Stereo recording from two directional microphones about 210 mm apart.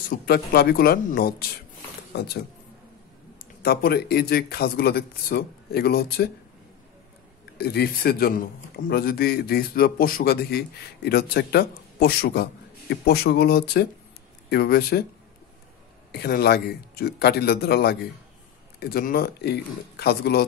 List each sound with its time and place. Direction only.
0.1 s speech: 50° left (ahead or behind)
7.5 s speech: 50° left (ahead or behind)
16.1 s speech: 50° left (ahead or behind)